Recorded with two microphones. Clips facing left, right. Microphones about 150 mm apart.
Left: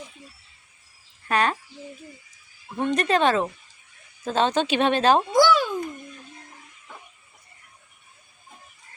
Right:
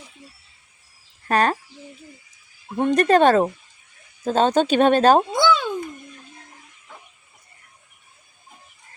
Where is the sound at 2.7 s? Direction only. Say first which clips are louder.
Right 6 dB; 40° right (ahead or behind).